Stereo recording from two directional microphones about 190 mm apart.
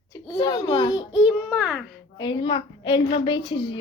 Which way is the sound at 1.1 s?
5° right (ahead or behind).